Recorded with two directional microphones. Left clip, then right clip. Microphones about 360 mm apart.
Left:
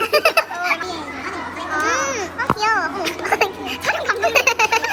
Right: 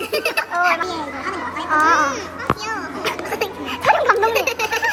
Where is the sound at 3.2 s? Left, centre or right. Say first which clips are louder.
Left 5 dB; centre.